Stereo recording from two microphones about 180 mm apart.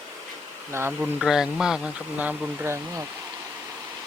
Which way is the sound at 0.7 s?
15° right (ahead or behind).